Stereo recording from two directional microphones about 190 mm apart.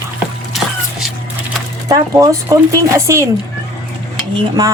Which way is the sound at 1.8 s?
20° right (ahead or behind).